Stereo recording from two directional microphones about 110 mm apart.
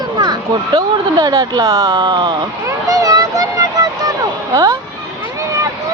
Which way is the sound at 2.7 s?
30° right (ahead or behind).